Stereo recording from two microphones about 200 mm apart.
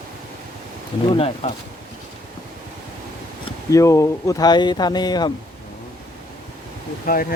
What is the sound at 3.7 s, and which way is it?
Speech, 15° left (ahead or behind).